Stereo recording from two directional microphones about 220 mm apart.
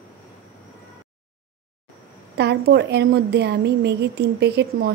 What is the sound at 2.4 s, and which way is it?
A woman's voice, 50° right (ahead or behind).